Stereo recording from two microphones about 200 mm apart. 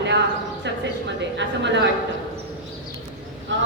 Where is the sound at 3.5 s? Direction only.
65° right (ahead or behind).